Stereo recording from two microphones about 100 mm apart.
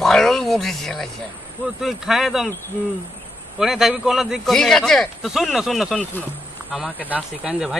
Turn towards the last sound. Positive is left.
turn(degrees=-10)  # may be behind; listen again after turning